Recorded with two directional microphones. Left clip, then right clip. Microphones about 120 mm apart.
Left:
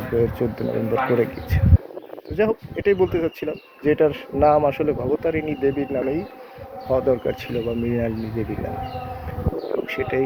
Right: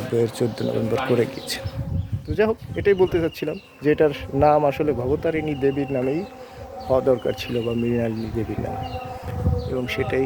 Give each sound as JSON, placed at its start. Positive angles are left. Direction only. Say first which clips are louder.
{"t": 0.2, "sound": "speech", "louder": "left 1 dB", "side_deg": -25}
{"t": 2.3, "sound": "speech", "louder": "even", "side_deg": -25}
{"t": 10.0, "sound": "speech", "louder": "even", "side_deg": -30}